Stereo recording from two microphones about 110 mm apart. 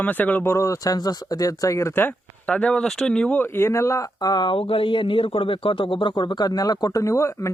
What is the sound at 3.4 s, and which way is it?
Speech, 20° left (ahead or behind).